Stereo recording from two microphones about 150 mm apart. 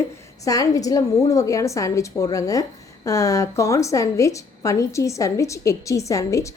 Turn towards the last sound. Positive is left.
turn(degrees=20)  # may be behind; listen again after turning